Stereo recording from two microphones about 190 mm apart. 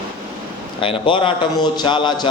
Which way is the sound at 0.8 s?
25° left (ahead or behind).